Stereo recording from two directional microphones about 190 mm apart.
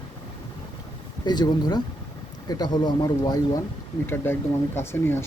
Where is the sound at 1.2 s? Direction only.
20° left (ahead or behind).